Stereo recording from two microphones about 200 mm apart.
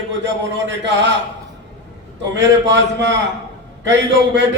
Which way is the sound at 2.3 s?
60° right (ahead or behind).